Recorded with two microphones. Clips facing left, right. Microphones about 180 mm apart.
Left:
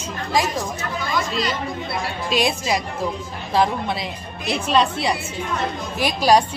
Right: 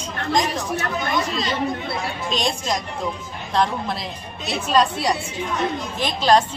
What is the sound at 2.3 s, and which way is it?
Speech, 10° left (ahead or behind).